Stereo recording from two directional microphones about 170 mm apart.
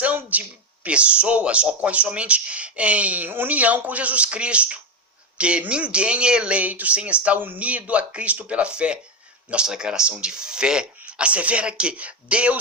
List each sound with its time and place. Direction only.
0.0 s speech: 10° right (ahead or behind)